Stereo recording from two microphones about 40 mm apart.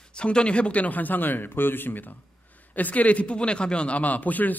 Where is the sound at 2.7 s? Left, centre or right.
Left.